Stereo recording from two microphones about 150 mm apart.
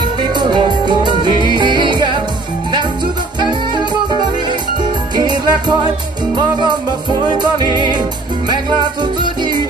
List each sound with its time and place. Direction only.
0.2 s music: 30° right (ahead or behind)
3.3 s music: 30° right (ahead or behind)